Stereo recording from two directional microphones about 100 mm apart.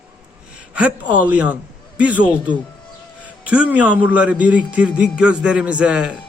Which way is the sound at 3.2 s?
10° right (ahead or behind).